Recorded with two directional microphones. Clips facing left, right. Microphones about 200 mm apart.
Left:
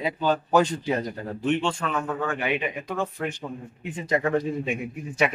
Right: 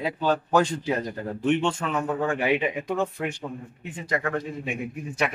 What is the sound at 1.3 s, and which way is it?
Speech, 15° right (ahead or behind).